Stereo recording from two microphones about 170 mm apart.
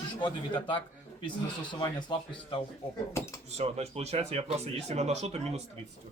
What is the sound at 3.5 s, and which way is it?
Speech, 40° right (ahead or behind).